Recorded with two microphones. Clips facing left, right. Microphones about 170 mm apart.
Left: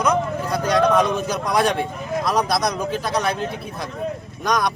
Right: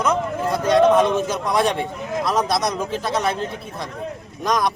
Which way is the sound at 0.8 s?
25° right (ahead or behind).